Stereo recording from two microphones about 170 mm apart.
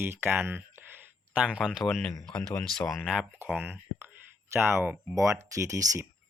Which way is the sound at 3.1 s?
5° right (ahead or behind).